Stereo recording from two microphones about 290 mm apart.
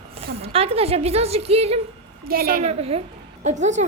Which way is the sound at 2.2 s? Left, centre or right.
Right.